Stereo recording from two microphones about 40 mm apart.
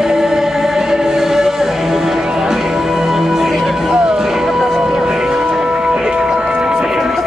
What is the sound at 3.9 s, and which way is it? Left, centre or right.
Music, centre.